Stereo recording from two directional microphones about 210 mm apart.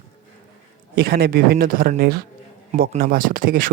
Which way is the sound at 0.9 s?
50° right (ahead or behind).